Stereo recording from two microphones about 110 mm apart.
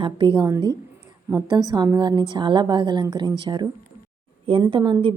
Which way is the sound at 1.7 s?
40° right (ahead or behind).